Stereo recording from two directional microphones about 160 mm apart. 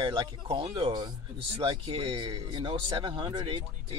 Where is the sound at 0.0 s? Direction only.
30° right (ahead or behind).